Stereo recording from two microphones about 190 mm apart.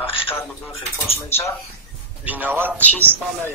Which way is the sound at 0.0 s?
30° left (ahead or behind).